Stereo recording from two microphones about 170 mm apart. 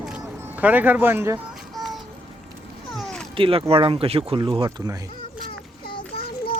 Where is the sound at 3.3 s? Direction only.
30° right (ahead or behind).